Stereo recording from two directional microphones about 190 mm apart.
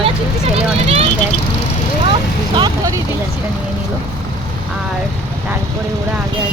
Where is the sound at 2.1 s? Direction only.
25° right (ahead or behind).